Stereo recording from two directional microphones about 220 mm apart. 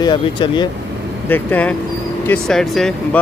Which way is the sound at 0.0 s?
20° left (ahead or behind).